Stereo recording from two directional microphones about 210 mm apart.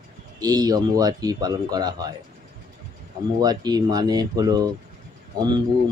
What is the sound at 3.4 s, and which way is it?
Speech, 20° right (ahead or behind).